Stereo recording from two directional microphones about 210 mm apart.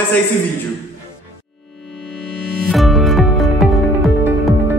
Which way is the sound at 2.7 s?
Centre (ahead or behind).